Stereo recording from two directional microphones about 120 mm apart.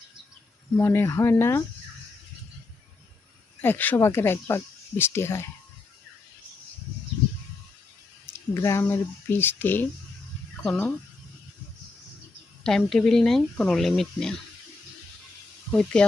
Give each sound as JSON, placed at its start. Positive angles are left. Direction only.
{"t": 0.8, "sound": "speech", "side_deg": 20}
{"t": 3.6, "sound": "speech", "side_deg": 15}
{"t": 8.3, "sound": "speech", "side_deg": 25}
{"t": 12.6, "sound": "speech", "side_deg": 5}
{"t": 15.7, "sound": "speech", "side_deg": 10}